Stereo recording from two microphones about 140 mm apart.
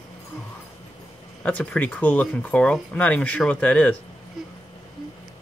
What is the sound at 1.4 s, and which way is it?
Speech, 10° left (ahead or behind).